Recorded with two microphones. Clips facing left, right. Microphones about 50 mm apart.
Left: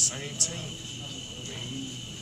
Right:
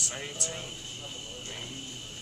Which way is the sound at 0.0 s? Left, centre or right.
Centre.